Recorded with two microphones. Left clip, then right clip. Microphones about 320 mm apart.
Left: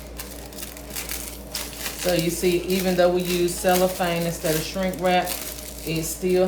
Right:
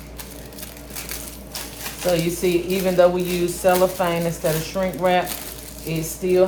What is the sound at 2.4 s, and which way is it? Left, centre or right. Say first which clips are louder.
Speech: right 2 dB; centre.